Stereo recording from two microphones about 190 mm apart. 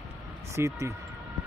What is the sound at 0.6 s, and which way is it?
Speech, 15° right (ahead or behind).